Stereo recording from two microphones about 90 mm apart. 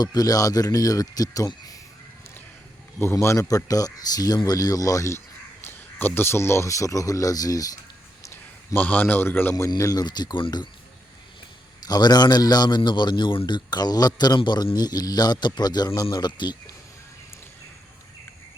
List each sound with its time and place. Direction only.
0.0 s a man's voice: 45° left (ahead or behind)
1.5 s a sound: 45° left (ahead or behind)
3.0 s speech: 30° left (ahead or behind)
5.6 s speech: 25° left (ahead or behind); by 7.7 s 45° left (ahead or behind)
8.7 s a man's voice: 20° left (ahead or behind)
9.6 s a man's voice: 40° left (ahead or behind)
11.9 s a man's voice: 50° left (ahead or behind)